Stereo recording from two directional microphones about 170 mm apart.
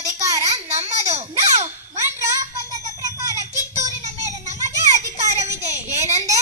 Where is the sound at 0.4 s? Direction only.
40° right (ahead or behind).